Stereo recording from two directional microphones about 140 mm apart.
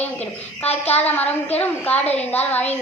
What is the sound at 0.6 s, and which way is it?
Speech, 50° left (ahead or behind).